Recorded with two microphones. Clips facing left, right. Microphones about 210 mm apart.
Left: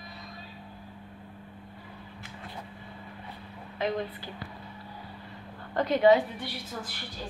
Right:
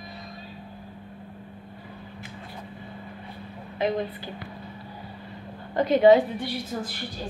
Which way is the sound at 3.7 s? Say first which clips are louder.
Right 4 dB; 15° right (ahead or behind).